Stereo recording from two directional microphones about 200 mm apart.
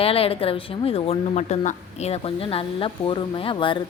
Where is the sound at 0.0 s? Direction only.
30° left (ahead or behind).